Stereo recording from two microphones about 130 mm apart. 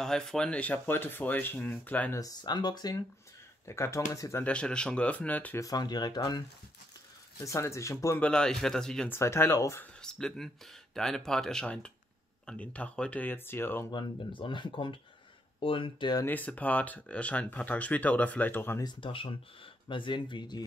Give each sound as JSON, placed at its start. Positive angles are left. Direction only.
{"t": 0.0, "sound": "speech", "side_deg": 5}
{"t": 2.1, "sound": "speech", "side_deg": 30}
{"t": 3.6, "sound": "speech", "side_deg": 20}
{"t": 4.5, "sound": "speech", "side_deg": 5}
{"t": 5.6, "sound": "speech", "side_deg": 30}
{"t": 8.2, "sound": "speech", "side_deg": 5}
{"t": 9.1, "sound": "speech", "side_deg": 20}
{"t": 10.0, "sound": "speech", "side_deg": 5}
{"t": 13.9, "sound": "speech", "side_deg": 40}
{"t": 16.3, "sound": "speech", "side_deg": 10}
{"t": 18.8, "sound": "speech", "side_deg": 35}